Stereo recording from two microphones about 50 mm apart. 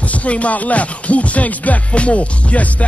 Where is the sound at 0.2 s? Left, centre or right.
Left.